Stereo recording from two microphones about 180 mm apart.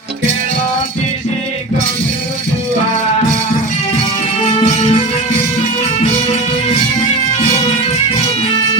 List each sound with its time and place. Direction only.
4.4 s music: 30° left (ahead or behind)